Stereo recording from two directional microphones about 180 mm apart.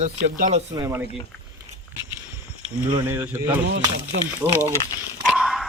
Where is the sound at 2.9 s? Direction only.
10° right (ahead or behind).